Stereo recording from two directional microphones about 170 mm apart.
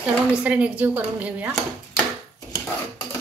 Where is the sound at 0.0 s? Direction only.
5° right (ahead or behind).